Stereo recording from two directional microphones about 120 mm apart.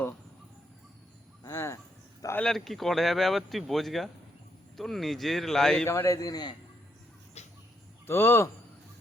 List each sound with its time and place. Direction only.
1.5 s cricket: 25° left (ahead or behind)
2.4 s speech: centre (ahead or behind)
5.8 s a man's voice: 25° left (ahead or behind)
7.4 s bird: 65° left (ahead or behind)
8.0 s speech: 20° left (ahead or behind)